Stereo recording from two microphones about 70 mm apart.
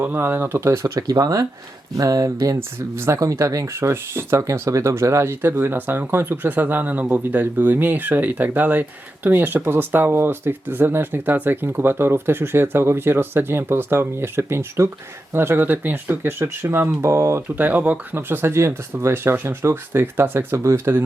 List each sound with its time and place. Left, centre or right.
0.0 s speech: right
0.6 s speech: right
0.9 s speech: right
2.6 s speech: right
3.8 s speech: right
17.6 s speech: right
18.1 s speech: right